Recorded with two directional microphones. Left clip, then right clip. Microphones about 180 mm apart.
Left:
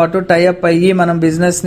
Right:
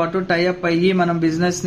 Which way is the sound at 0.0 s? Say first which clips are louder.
Left 8 dB; 40° left (ahead or behind).